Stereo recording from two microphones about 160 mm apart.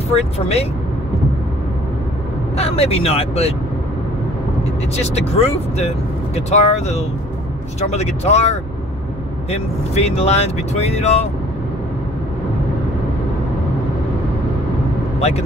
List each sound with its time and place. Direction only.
0.1 s speech: 40° left (ahead or behind)
2.5 s speech: 40° left (ahead or behind)
4.9 s speech: 40° left (ahead or behind)
15.1 s speech: 40° left (ahead or behind)